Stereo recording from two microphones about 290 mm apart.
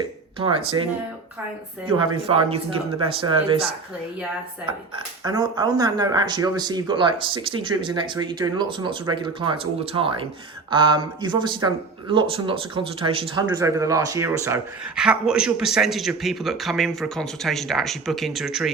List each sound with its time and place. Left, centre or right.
0.3 s speech: centre
2.2 s speech: centre
4.9 s speech: centre